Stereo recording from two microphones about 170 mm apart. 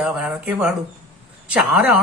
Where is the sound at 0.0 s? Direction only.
5° right (ahead or behind).